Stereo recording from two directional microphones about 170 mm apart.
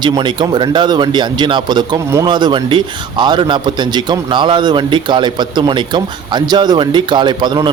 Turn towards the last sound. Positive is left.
turn(degrees=-25)  # may be behind; listen again after turning